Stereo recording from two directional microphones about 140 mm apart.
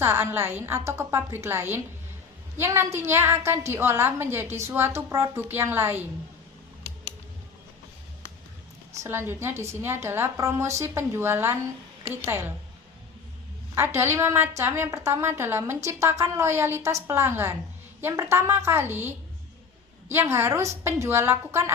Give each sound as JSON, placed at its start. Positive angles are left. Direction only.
{"t": 0.0, "sound": "a woman's voice", "side_deg": -20}
{"t": 9.0, "sound": "a woman's voice", "side_deg": -15}
{"t": 13.7, "sound": "a woman's voice", "side_deg": -15}